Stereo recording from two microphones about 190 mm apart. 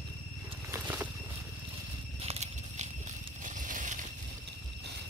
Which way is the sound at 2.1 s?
35° right (ahead or behind).